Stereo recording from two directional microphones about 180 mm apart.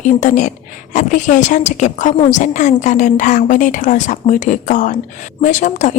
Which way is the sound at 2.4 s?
45° left (ahead or behind).